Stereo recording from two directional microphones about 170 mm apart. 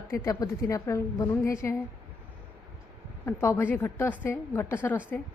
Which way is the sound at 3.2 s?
15° left (ahead or behind).